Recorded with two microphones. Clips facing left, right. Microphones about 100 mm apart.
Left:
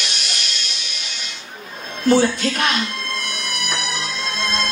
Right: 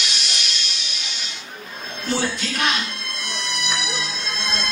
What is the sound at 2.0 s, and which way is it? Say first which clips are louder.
Speech: left 9 dB; 55° left (ahead or behind).